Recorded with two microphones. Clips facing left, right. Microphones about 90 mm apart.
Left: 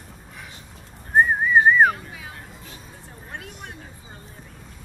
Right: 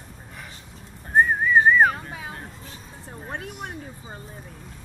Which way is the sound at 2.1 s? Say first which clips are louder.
Right 4 dB; 35° right (ahead or behind).